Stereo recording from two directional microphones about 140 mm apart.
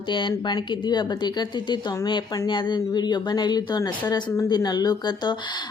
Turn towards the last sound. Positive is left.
turn(degrees=30)  # may be behind; listen again after turning